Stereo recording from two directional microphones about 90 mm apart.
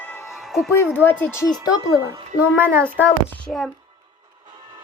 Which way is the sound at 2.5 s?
25° right (ahead or behind).